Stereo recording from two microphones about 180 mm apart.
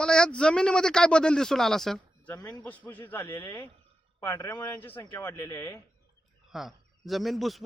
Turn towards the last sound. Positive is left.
turn(degrees=0)  # may be behind; listen again after turning